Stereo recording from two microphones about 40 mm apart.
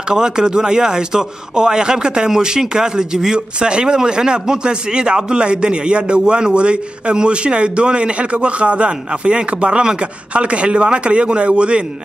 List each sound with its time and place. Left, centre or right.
0.1 s a man's voice: centre